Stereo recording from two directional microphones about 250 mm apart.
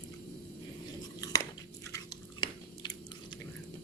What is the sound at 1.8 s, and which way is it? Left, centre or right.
Chewing, centre.